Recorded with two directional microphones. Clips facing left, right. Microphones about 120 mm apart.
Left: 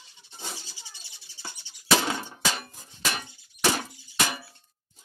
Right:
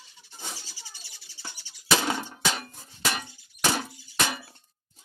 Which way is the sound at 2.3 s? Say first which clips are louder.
Right 1 dB; centre (ahead or behind).